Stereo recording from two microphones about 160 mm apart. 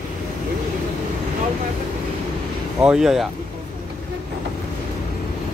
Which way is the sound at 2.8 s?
5° right (ahead or behind).